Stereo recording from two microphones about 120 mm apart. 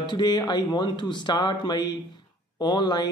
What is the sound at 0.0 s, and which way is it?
Speech, 35° left (ahead or behind).